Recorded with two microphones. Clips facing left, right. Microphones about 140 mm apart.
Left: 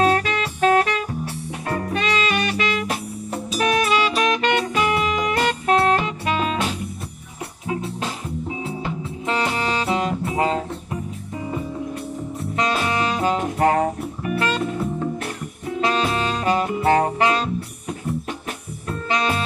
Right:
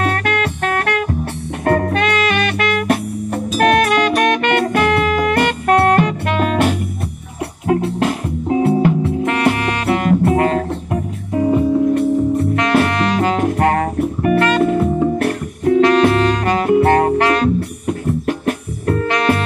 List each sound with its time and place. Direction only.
0.0 s music: 60° right (ahead or behind)